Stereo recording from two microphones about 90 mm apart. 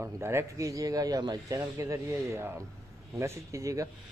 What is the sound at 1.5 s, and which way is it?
Speech, 35° right (ahead or behind).